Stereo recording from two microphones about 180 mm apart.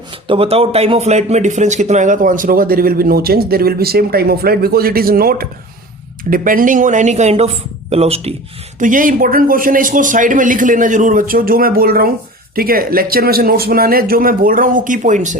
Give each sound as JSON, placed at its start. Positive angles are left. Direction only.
{"t": 0.3, "sound": "speech", "side_deg": -30}
{"t": 8.8, "sound": "a man's voice", "side_deg": -45}